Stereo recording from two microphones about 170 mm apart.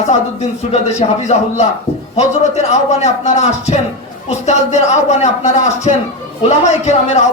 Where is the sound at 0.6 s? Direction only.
40° left (ahead or behind).